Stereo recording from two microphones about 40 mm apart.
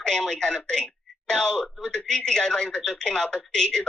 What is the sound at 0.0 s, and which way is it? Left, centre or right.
Speech, centre.